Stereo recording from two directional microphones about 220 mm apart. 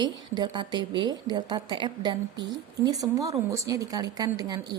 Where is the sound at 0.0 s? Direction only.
20° right (ahead or behind).